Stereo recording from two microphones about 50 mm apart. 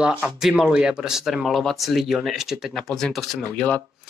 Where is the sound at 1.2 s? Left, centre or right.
Centre.